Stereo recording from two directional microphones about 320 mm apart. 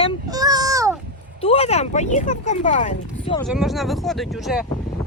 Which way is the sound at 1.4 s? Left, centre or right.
Centre.